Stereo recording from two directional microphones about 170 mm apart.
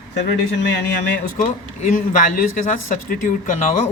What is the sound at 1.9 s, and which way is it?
Speech, 50° left (ahead or behind).